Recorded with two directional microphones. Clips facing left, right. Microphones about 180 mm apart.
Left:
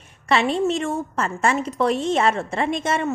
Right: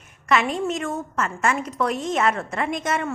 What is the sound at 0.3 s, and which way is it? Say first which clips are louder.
A woman's voice: left 2 dB; 30° left (ahead or behind).